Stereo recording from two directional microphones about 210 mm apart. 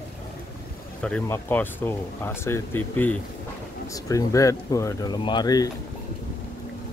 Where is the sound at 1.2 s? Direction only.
10° left (ahead or behind).